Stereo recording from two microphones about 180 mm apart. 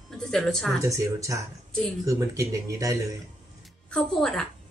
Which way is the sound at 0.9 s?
15° right (ahead or behind).